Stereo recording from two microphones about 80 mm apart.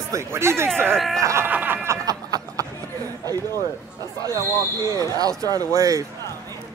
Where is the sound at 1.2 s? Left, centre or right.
Right.